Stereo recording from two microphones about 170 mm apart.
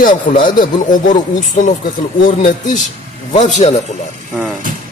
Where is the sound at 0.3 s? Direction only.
50° left (ahead or behind).